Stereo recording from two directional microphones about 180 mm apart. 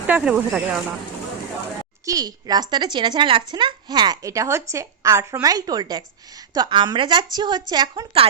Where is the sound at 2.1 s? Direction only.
20° right (ahead or behind).